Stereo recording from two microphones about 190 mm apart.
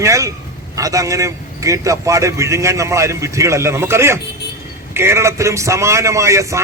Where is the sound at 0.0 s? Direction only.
15° right (ahead or behind).